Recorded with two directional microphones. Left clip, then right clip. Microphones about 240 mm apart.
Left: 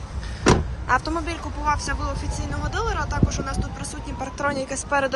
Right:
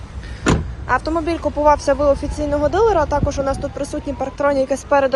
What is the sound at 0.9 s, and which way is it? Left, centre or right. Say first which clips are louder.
A woman's voice: right 5 dB; centre.